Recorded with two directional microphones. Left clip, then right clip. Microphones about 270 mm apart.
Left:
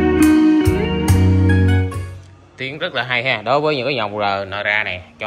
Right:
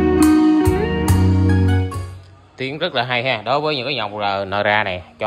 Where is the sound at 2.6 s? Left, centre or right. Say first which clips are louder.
Right 1 dB; centre.